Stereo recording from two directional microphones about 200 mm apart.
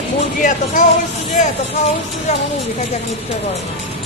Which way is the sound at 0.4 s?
40° left (ahead or behind).